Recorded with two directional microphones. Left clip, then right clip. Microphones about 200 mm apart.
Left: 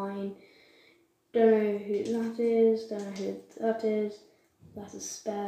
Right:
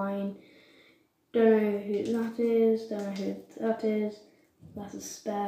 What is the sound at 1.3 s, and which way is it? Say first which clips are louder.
A woman's voice: even; 5° right (ahead or behind).